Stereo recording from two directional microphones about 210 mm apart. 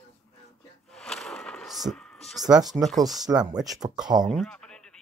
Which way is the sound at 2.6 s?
20° right (ahead or behind).